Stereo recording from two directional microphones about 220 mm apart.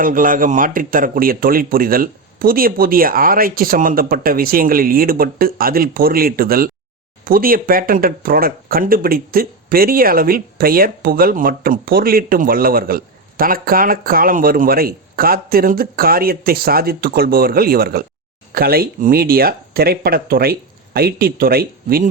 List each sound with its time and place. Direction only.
0.0 s speech: 40° right (ahead or behind)